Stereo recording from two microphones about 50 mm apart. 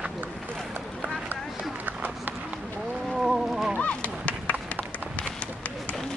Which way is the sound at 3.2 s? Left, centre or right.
Centre.